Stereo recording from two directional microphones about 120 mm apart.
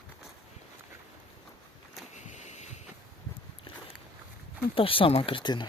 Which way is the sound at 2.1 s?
80° left.